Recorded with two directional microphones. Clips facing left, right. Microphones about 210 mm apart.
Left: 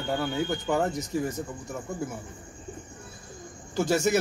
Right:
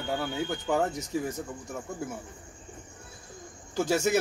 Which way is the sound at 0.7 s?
10° right (ahead or behind).